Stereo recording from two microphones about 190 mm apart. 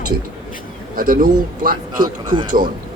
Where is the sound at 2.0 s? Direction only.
25° right (ahead or behind).